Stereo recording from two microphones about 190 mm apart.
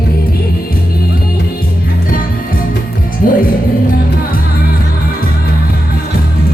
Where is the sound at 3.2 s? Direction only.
50° left (ahead or behind).